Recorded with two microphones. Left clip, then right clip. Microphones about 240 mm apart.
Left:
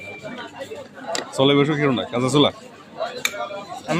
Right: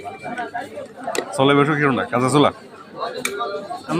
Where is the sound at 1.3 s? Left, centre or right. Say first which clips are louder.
Right 2 dB; centre.